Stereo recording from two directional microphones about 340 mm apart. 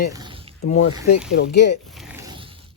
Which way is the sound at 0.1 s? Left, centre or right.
Centre.